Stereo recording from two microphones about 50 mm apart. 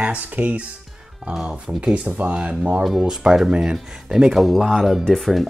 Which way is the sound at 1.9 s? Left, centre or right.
Right.